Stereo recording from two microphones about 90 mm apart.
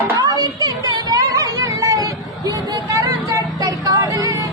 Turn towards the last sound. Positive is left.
turn(degrees=-40)  # may be behind; listen again after turning